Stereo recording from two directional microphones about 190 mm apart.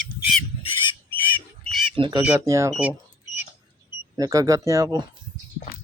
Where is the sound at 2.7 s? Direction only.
5° right (ahead or behind).